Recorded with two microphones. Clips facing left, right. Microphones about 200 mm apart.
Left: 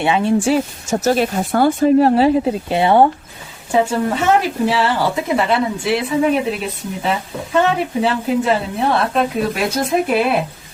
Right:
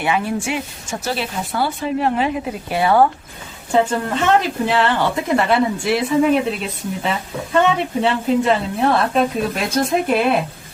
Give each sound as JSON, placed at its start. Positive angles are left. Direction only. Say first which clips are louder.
{"t": 0.0, "sound": "speech", "louder": "left 4 dB", "side_deg": 25}
{"t": 0.4, "sound": "speech", "louder": "left 8 dB", "side_deg": 40}
{"t": 3.7, "sound": "a woman's voice", "louder": "left 1 dB", "side_deg": 5}